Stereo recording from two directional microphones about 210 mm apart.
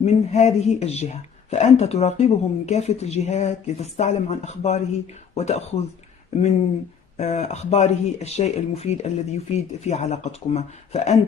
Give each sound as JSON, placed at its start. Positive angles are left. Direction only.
{"t": 0.0, "sound": "a man's voice", "side_deg": 30}
{"t": 7.2, "sound": "a man's voice", "side_deg": 30}